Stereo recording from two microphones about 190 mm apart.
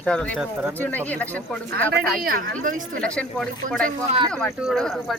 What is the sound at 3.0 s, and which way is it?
Speech, 5° left (ahead or behind).